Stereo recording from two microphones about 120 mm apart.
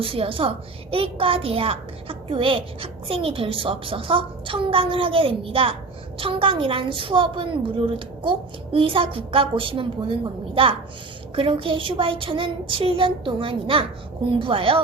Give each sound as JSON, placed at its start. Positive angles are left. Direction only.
{"t": 0.0, "sound": "a child's voice", "side_deg": -50}